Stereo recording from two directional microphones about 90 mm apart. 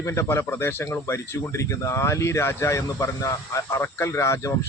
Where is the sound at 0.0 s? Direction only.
35° left (ahead or behind).